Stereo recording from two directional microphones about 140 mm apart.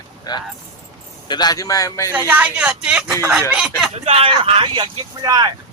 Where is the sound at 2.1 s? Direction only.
10° right (ahead or behind).